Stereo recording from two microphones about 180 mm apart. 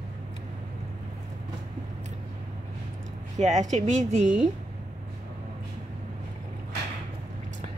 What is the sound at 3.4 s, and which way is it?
Speech, 40° right (ahead or behind).